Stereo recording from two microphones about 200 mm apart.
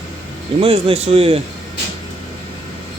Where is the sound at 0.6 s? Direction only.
30° right (ahead or behind).